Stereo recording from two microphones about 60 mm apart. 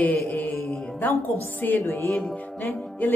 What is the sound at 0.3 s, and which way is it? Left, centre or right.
Music, left.